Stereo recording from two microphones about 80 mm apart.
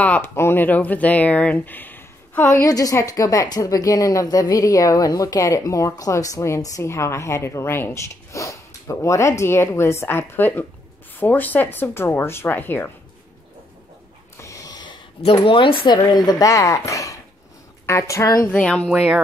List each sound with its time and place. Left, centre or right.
0.2 s speech: left
14.4 s a sound: left
15.4 s speech: left
16.1 s speech: left
18.5 s speech: centre